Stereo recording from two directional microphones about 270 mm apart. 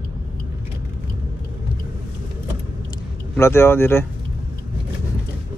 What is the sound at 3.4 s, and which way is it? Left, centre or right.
Speech, centre.